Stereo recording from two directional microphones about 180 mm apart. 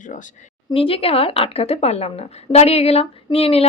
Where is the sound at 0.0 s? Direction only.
45° left (ahead or behind).